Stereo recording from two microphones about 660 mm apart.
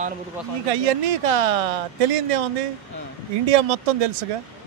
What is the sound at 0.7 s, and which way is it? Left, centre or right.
Speech, right.